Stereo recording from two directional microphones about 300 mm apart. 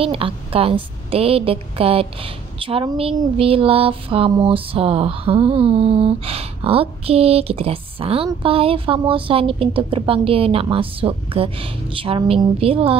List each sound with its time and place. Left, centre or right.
0.0 s a woman's voice: centre